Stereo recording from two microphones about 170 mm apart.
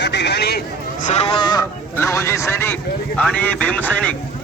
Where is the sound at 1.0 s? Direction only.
40° left (ahead or behind).